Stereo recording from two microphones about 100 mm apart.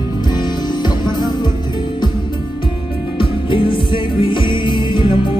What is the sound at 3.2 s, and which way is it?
Music, 60° left (ahead or behind).